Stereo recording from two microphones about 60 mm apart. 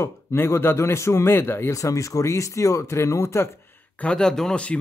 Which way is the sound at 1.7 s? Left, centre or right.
Left.